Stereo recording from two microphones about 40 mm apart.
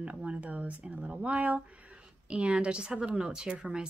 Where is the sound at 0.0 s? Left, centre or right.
Right.